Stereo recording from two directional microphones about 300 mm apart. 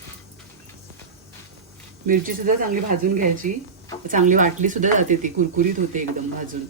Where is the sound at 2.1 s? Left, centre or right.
Right.